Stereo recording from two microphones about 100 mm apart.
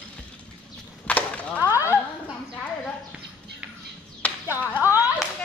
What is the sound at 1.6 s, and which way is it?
Speech, 35° left (ahead or behind).